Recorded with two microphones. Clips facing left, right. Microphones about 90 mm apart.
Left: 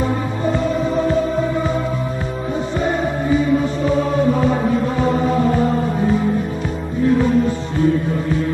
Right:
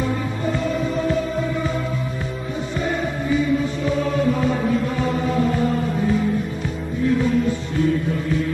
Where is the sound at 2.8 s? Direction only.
35° left (ahead or behind).